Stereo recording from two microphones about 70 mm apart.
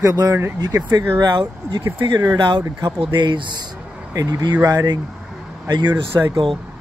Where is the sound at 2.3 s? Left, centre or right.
Right.